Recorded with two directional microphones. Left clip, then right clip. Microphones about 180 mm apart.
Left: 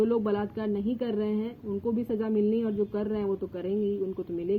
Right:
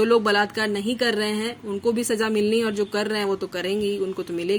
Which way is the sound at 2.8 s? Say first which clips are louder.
Right 6 dB; 45° right (ahead or behind).